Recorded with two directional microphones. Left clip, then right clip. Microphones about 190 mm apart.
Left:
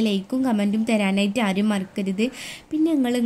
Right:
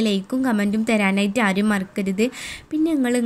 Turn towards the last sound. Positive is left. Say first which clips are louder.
# right 1 dB
turn(degrees=-15)  # may be behind; listen again after turning